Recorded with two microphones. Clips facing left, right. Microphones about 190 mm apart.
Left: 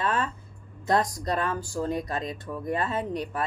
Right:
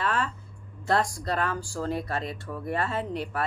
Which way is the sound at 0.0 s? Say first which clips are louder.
Left 1 dB; 20° left (ahead or behind).